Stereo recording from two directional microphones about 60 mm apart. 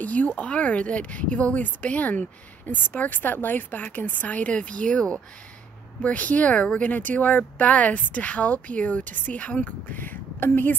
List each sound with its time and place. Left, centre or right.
0.0 s speech: left
6.0 s speech: left